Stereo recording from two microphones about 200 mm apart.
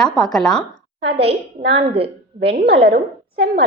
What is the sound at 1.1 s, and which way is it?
A woman's voice, 30° right (ahead or behind).